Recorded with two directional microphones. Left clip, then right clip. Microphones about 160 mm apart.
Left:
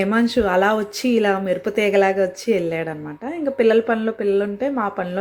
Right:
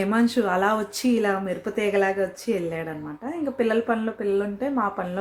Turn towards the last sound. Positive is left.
turn(degrees=20)  # may be behind; listen again after turning